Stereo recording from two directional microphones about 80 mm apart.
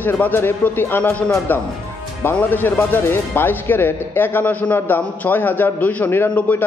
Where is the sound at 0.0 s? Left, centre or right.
Left.